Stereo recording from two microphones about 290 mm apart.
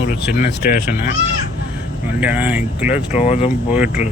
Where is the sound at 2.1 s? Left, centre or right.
Centre.